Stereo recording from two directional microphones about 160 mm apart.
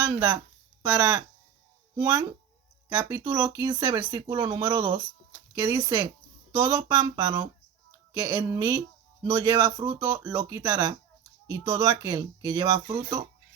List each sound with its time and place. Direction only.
0.1 s speech: 15° right (ahead or behind)
9.7 s speech: 30° right (ahead or behind)
10.3 s speech: 20° right (ahead or behind)